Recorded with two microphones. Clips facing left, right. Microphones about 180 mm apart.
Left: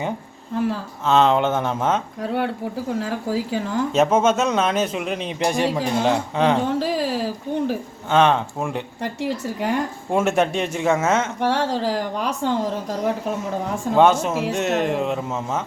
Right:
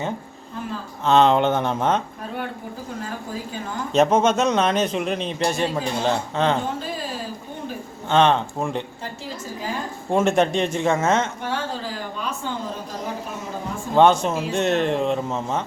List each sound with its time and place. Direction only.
1.0 s speech: 5° left (ahead or behind)
2.2 s a woman's voice: 70° left (ahead or behind)
3.9 s speech: 5° left (ahead or behind)
6.7 s a sound: 80° left
8.1 s speech: 5° left (ahead or behind)
9.2 s a woman's voice: 70° left (ahead or behind)
10.1 s speech: 5° left (ahead or behind)
11.3 s speech: 85° left
13.9 s speech: 5° left (ahead or behind)